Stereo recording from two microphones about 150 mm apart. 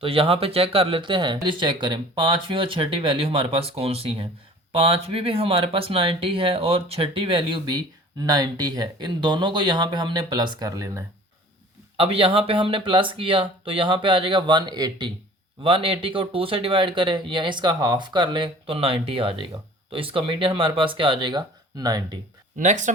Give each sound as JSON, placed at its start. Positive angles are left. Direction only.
{"t": 0.0, "sound": "speech", "side_deg": -35}
{"t": 11.9, "sound": "speech", "side_deg": -40}
{"t": 22.5, "sound": "speech", "side_deg": -55}